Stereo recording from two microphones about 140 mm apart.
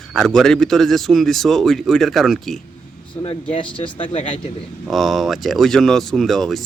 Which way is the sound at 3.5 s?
35° left (ahead or behind).